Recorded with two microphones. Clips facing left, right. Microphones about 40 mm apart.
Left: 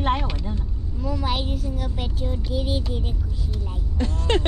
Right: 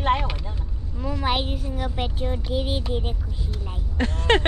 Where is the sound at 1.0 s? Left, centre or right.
Right.